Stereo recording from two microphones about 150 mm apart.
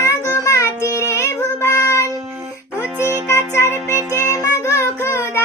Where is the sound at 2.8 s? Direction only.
15° right (ahead or behind).